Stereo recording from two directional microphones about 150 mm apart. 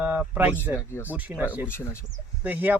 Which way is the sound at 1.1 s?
10° right (ahead or behind).